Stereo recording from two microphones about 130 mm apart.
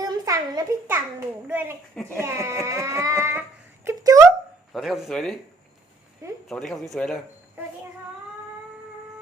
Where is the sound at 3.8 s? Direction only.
25° right (ahead or behind).